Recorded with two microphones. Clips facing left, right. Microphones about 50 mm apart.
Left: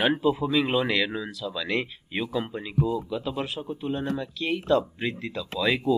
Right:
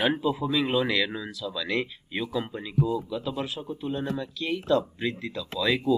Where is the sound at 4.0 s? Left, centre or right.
Centre.